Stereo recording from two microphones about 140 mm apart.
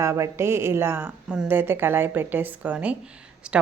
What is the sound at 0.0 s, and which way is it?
A woman's voice, 20° right (ahead or behind).